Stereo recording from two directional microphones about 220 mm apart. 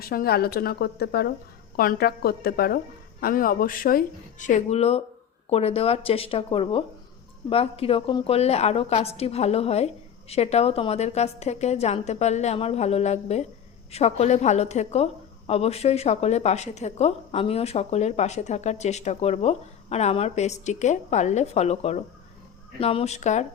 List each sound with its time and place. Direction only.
0.0 s a woman's voice: 40° left (ahead or behind)